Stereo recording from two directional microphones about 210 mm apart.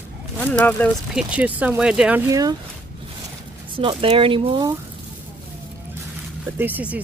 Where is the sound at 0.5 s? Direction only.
5° left (ahead or behind).